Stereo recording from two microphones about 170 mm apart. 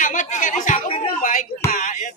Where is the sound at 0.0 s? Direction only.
50° left (ahead or behind).